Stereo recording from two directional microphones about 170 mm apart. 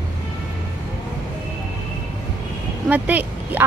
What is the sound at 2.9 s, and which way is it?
Speech, 10° right (ahead or behind).